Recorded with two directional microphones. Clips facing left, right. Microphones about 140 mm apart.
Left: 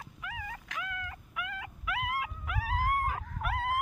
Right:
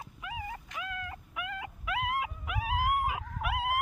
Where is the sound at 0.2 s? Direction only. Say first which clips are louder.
Right 3 dB; 25° right (ahead or behind).